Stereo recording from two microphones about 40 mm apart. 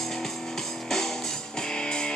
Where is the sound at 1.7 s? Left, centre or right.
Centre.